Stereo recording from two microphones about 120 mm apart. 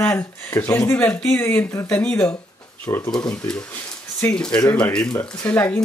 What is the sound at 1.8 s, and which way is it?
Speech, 10° left (ahead or behind).